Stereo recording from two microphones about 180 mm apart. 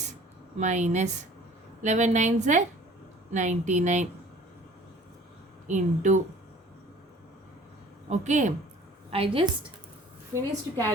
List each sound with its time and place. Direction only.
0.6 s a woman's voice: 40° right (ahead or behind)
5.6 s speech: 45° right (ahead or behind)
8.1 s a woman's voice: 40° right (ahead or behind)
9.0 s a woman's voice: 30° right (ahead or behind)
10.3 s a woman's voice: 15° right (ahead or behind)